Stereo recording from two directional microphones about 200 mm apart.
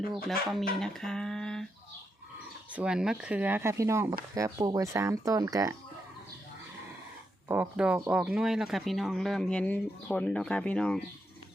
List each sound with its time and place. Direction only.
0.1 s speech: centre (ahead or behind)
2.7 s speech: 5° right (ahead or behind)
7.4 s speech: 10° right (ahead or behind)